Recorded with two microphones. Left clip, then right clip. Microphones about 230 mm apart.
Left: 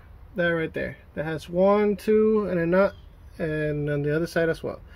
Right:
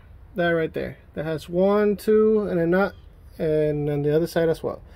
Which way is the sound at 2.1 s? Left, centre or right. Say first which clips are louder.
Right 2 dB; right.